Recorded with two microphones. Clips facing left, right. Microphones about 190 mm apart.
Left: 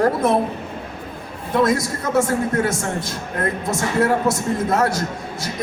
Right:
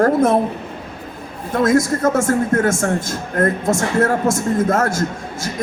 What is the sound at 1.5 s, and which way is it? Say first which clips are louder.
A man's voice: right 3 dB; 50° right (ahead or behind).